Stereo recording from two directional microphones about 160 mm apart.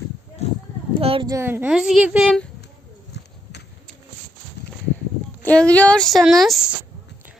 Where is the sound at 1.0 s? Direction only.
35° right (ahead or behind).